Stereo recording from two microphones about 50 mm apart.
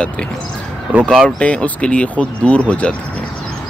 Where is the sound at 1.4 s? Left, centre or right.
Left.